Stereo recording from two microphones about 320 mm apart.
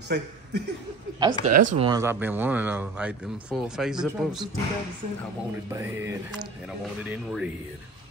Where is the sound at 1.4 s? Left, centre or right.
Right.